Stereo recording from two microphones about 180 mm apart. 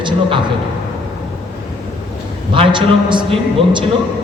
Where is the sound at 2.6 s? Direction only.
25° right (ahead or behind).